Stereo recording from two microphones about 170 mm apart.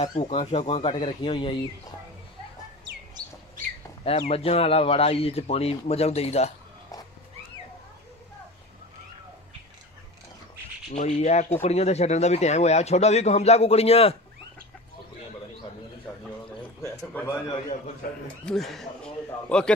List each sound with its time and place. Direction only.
0.0 s a man's voice: 35° left (ahead or behind)
3.2 s chirp: 25° right (ahead or behind)
4.0 s a man's voice: 35° left (ahead or behind)
10.9 s a man's voice: 40° left (ahead or behind)
16.8 s a man's voice: 15° left (ahead or behind)
18.4 s speech: 5° left (ahead or behind)